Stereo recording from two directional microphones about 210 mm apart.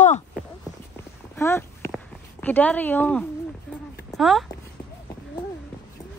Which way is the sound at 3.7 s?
5° left (ahead or behind).